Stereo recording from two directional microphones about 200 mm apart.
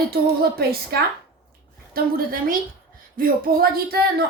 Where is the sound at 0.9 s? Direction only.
50° right (ahead or behind).